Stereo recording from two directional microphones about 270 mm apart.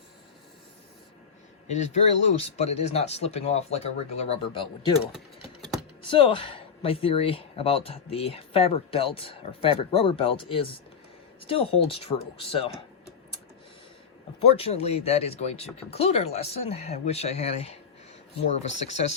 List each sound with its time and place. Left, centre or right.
1.6 s speech: left
6.1 s speech: centre
14.4 s speech: left
18.9 s speech: left